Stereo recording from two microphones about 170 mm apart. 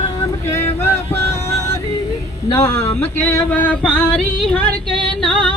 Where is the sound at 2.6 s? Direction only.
15° left (ahead or behind).